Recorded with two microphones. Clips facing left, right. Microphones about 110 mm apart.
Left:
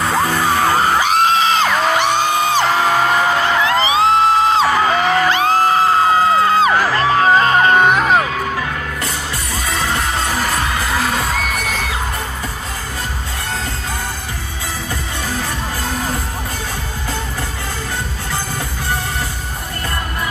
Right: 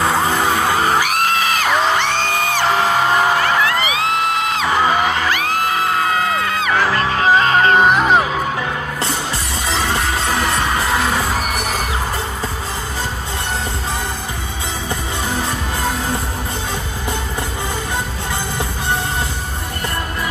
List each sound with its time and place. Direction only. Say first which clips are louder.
1.0 s music: left 4 dB; 25° left (ahead or behind)
2.0 s music: left 3 dB; 15° left (ahead or behind)
3.6 s music: left 4 dB; 25° left (ahead or behind)
7.7 s music: even; centre (ahead or behind)